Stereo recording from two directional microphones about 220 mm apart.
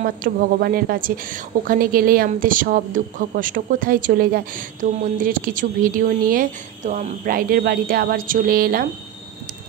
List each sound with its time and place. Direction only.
0.0 s speech: 40° right (ahead or behind)